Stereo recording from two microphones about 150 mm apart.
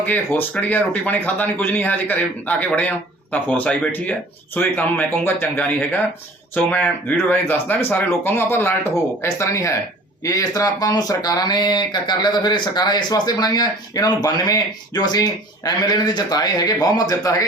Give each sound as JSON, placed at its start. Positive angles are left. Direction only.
{"t": 0.0, "sound": "speech", "side_deg": 10}